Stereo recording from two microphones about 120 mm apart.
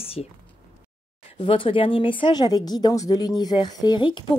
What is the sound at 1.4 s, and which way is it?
Speech, 50° left (ahead or behind).